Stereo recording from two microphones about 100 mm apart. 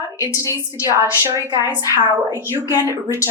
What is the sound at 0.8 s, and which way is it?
Speech, 25° right (ahead or behind).